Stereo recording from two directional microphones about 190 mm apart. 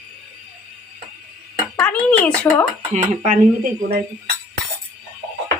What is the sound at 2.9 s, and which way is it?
Speech, 35° right (ahead or behind).